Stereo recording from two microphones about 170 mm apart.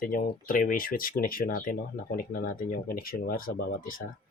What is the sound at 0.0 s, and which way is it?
Speech, 55° left (ahead or behind).